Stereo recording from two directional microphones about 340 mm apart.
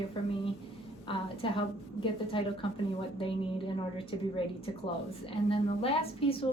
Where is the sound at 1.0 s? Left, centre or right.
Centre.